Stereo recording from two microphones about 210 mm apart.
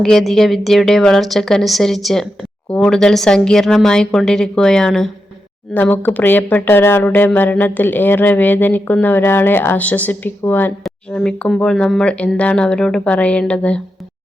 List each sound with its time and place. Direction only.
0.0 s a woman's voice: centre (ahead or behind)